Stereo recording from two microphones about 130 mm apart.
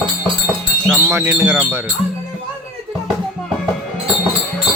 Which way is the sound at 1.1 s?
15° right (ahead or behind).